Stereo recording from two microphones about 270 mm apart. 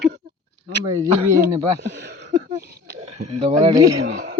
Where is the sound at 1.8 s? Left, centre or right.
Right.